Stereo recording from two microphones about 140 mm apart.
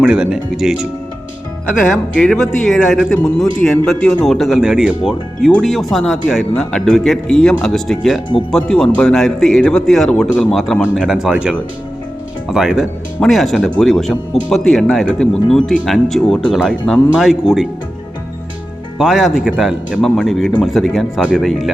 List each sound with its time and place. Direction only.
0.0 s a man's voice: 5° right (ahead or behind)
2.1 s a man's voice: centre (ahead or behind)
18.9 s a man's voice: 5° right (ahead or behind)